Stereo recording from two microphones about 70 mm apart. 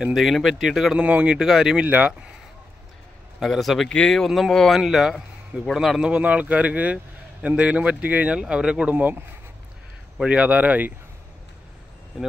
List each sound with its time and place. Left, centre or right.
0.0 s speech: centre
0.9 s speech: centre
1.9 s speech: centre
3.3 s speech: centre
4.7 s speech: centre
6.0 s speech: centre
8.9 s speech: right
10.2 s speech: centre